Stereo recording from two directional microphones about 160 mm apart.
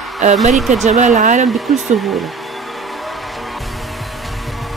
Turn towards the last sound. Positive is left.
turn(degrees=0)  # may be behind; listen again after turning